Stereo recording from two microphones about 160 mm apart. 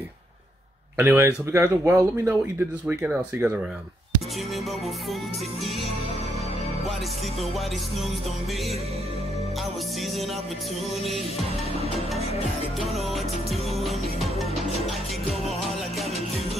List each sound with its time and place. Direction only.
0.9 s speech: 15° right (ahead or behind)
12.9 s music: centre (ahead or behind)